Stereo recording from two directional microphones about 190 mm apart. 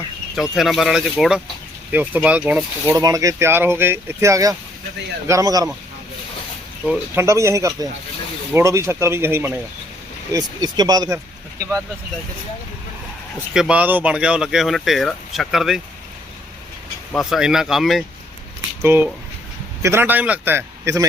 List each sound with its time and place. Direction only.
0.3 s speech: centre (ahead or behind)
2.8 s speech: 15° right (ahead or behind)
6.8 s speech: 10° right (ahead or behind)
13.5 s speech: 5° right (ahead or behind)
17.1 s speech: centre (ahead or behind)
18.8 s speech: 10° right (ahead or behind)